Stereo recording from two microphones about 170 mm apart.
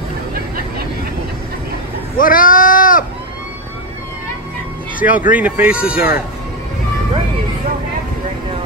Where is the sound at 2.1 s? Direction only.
55° left (ahead or behind).